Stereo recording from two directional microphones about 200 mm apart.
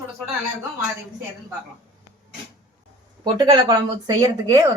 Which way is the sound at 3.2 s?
20° right (ahead or behind).